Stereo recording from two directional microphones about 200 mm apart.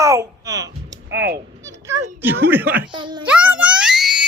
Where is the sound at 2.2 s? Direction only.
10° right (ahead or behind).